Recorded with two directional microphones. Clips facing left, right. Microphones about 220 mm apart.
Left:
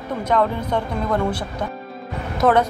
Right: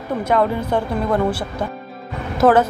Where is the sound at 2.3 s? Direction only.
Centre (ahead or behind).